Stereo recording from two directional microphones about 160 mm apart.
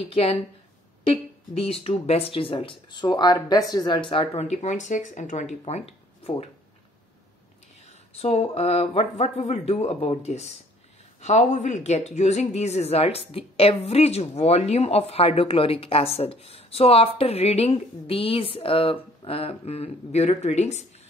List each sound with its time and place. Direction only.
0.1 s speech: 40° left (ahead or behind)
8.1 s speech: 40° left (ahead or behind)